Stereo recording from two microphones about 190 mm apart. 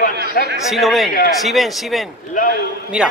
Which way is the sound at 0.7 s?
Centre (ahead or behind).